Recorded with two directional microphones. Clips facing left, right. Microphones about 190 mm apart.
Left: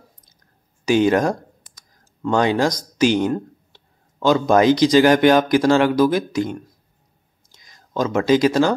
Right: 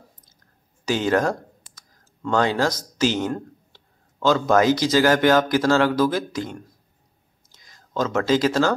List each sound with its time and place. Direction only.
0.8 s speech: 15° left (ahead or behind)
1.8 s clicking: 15° left (ahead or behind)
3.0 s speech: 15° left (ahead or behind)